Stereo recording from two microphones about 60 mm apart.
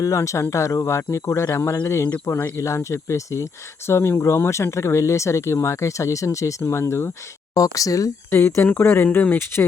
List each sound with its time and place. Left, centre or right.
0.0 s speech: left
2.2 s speech: left
2.6 s speech: left
7.5 s speech: left
8.3 s speech: left